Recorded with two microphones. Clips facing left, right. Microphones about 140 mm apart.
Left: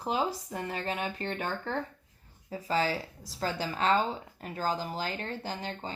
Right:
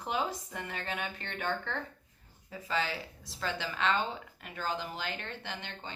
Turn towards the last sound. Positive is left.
turn(degrees=40)  # may be behind; listen again after turning